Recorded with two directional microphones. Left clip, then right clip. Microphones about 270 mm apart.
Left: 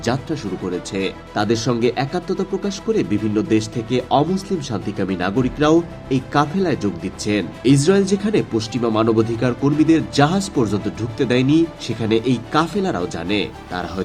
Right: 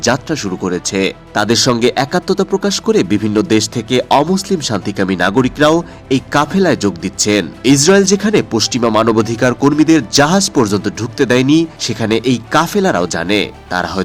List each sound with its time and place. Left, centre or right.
0.0 s speech: right